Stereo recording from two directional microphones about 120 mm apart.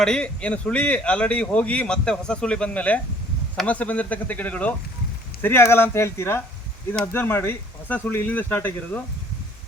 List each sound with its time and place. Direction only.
0.0 s a man's voice: 5° left (ahead or behind)